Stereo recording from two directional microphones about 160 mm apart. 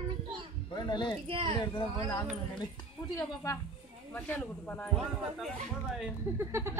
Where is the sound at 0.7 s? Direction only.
30° left (ahead or behind).